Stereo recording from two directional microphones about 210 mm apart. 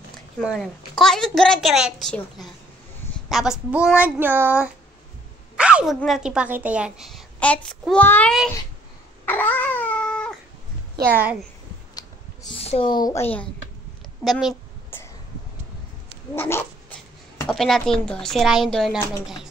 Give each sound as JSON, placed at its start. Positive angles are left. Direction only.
{"t": 0.4, "sound": "a woman's voice", "side_deg": 0}
{"t": 5.6, "sound": "a sound", "side_deg": -5}
{"t": 5.9, "sound": "a woman's voice", "side_deg": 0}
{"t": 9.2, "sound": "cat", "side_deg": 10}
{"t": 12.5, "sound": "speech", "side_deg": 25}
{"t": 13.0, "sound": "speech", "side_deg": 10}
{"t": 14.2, "sound": "a sound", "side_deg": 0}
{"t": 16.3, "sound": "speech", "side_deg": 10}
{"t": 17.5, "sound": "a woman's voice", "side_deg": 0}